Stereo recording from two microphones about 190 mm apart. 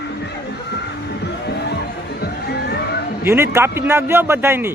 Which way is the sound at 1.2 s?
60° left (ahead or behind).